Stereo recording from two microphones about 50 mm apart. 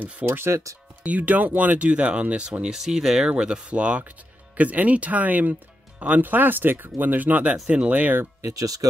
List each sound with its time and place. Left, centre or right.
0.2 s speech: right
1.0 s speech: right
2.6 s speech: centre; by 7.5 s right
7.6 s speech: right
7.9 s speech: right